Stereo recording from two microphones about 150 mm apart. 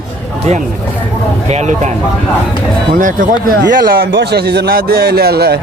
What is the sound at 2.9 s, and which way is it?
A man's voice, 65° right (ahead or behind).